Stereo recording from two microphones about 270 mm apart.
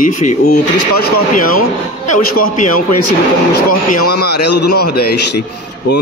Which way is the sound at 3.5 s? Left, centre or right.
Left.